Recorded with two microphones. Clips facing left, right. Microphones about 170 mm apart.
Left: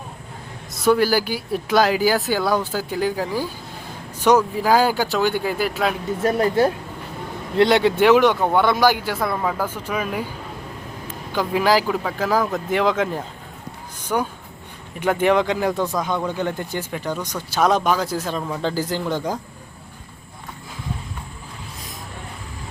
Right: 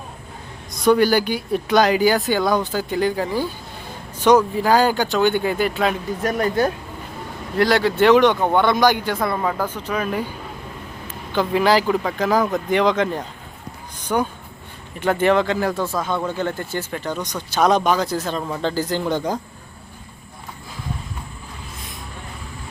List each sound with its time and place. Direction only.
0.7 s speech: 5° left (ahead or behind)
6.2 s speech: 30° left (ahead or behind)
8.0 s speech: 5° left (ahead or behind)
11.3 s speech: 10° left (ahead or behind)
15.0 s speech: 10° left (ahead or behind)